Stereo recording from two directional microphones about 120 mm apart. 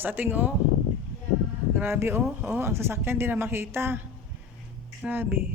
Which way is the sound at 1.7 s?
20° right (ahead or behind).